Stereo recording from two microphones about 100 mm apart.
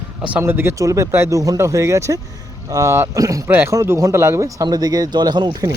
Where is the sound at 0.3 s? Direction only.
20° right (ahead or behind); by 5.5 s 45° right (ahead or behind).